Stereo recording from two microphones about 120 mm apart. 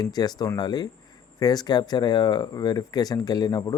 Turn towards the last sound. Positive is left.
turn(degrees=35)  # may be behind; listen again after turning